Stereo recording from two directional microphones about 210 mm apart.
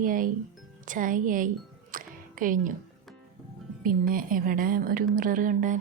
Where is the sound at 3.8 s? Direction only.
40° right (ahead or behind).